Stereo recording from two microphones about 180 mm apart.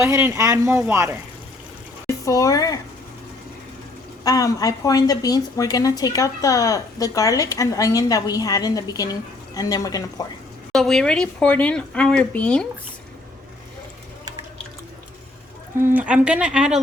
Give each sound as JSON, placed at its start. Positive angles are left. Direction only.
{"t": 0.0, "sound": "speech", "side_deg": -15}
{"t": 2.0, "sound": "speech", "side_deg": 15}
{"t": 4.2, "sound": "a woman's voice", "side_deg": 20}
{"t": 10.7, "sound": "speech", "side_deg": 5}
{"t": 15.8, "sound": "speech", "side_deg": -10}